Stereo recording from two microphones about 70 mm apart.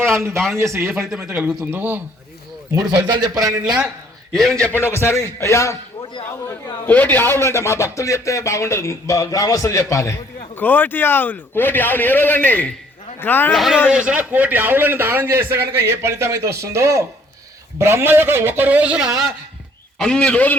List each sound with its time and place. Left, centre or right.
0.0 s a sound: right
0.3 s a man's voice: centre
0.6 s a man's voice: right
1.2 s a man's voice: right
3.1 s speech: right
4.3 s a man's voice: centre
4.8 s a man's voice: left
6.8 s a man's voice: left
10.6 s a man's voice: left
13.5 s a man's voice: centre
13.9 s a man's voice: centre
20.0 s a man's voice: centre